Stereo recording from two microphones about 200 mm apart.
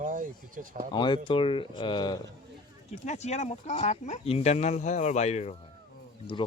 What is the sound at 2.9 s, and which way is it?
Speech, 35° left (ahead or behind).